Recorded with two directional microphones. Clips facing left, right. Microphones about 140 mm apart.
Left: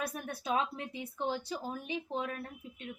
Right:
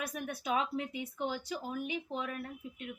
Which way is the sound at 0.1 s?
30° left (ahead or behind).